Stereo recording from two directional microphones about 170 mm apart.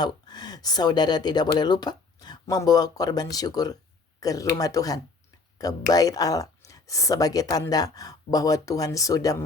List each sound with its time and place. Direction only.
0.0 s speech: 25° left (ahead or behind)